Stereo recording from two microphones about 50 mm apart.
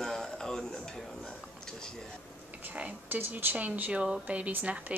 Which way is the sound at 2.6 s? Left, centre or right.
Right.